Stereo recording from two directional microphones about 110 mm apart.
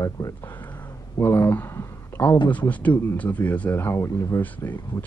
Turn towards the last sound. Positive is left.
turn(degrees=20)  # may be behind; listen again after turning